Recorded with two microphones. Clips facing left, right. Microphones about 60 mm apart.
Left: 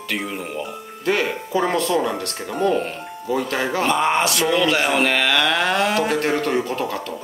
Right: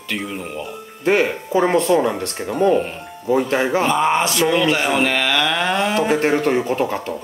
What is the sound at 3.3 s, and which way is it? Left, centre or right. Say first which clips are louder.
Speech: right 4 dB; centre.